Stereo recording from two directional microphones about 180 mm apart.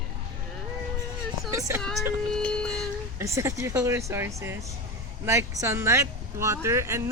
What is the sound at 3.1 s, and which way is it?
Speech, 15° right (ahead or behind).